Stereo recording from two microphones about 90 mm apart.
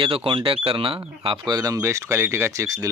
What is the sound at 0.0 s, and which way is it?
Speech, 80° right.